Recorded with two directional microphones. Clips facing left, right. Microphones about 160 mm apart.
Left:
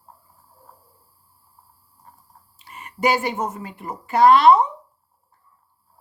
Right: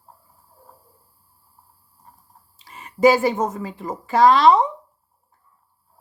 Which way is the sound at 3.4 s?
90° right.